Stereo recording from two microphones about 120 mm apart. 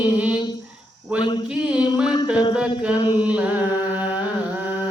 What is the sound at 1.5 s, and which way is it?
Mantra, 10° right (ahead or behind).